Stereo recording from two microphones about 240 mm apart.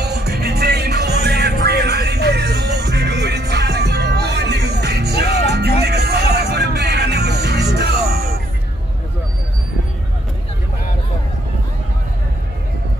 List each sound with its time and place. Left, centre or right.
0.0 s music: right